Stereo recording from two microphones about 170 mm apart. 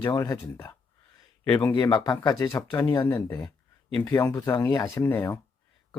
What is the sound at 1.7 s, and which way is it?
Speech, 25° left (ahead or behind).